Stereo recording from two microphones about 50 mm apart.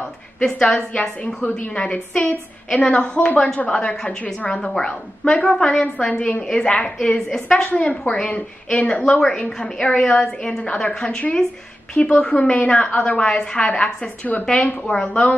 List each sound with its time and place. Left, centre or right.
0.4 s a woman's voice: centre
4.6 s a woman's voice: centre
9.2 s a woman's voice: centre